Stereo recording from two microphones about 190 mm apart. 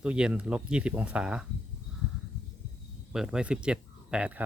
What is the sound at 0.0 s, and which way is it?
Speech, 5° right (ahead or behind).